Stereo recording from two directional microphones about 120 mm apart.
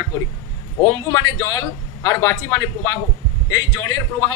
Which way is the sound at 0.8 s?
30° left (ahead or behind).